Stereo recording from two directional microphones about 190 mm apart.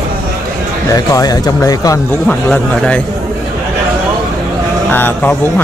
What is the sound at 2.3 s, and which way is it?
Speech, 5° left (ahead or behind).